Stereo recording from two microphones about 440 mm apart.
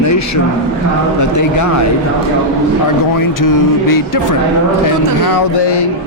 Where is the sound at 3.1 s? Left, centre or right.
Left.